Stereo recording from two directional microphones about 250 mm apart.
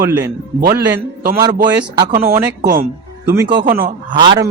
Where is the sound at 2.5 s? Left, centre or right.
Right.